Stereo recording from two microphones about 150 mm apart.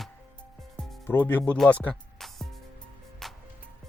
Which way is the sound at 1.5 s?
10° left (ahead or behind).